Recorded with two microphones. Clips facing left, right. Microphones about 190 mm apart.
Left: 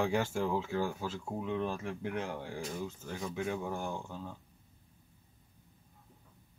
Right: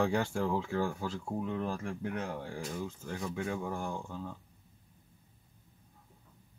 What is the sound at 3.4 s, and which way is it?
Speech, 20° left (ahead or behind).